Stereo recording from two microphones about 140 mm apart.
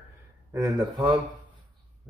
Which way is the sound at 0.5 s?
25° right (ahead or behind).